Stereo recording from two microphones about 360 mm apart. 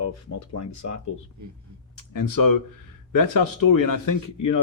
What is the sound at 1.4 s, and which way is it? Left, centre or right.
Speech, right.